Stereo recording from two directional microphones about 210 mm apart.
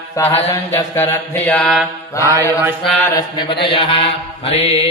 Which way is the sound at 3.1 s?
20° left (ahead or behind).